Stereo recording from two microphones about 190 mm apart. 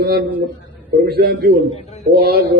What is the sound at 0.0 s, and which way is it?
A man's voice, 50° right (ahead or behind).